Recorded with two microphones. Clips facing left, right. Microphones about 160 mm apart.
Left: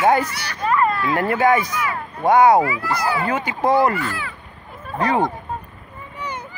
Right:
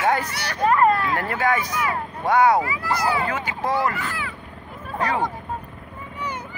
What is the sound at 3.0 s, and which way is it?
Speech, 25° right (ahead or behind).